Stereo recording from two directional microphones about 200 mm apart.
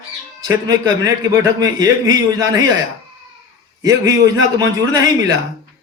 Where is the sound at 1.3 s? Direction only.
15° right (ahead or behind).